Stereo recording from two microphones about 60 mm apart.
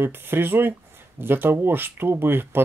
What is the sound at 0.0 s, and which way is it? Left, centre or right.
Speech, right.